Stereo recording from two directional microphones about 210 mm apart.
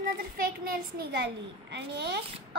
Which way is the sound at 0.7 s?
55° right (ahead or behind).